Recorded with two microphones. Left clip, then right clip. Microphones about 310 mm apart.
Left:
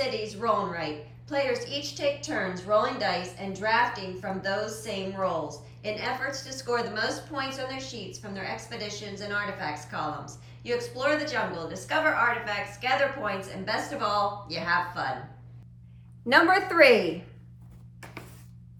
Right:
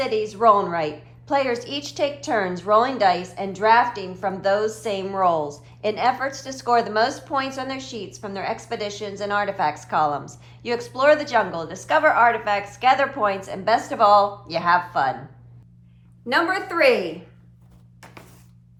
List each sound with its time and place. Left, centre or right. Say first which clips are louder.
0.1 s a sound: right 9 dB; centre
0.4 s a woman's voice: right 10 dB; centre
16.3 s a woman's voice: left 1 dB; centre